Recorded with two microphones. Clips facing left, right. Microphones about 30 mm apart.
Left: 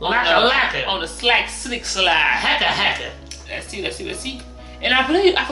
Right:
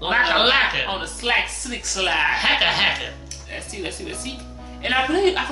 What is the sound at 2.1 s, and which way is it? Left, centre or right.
Speech, centre.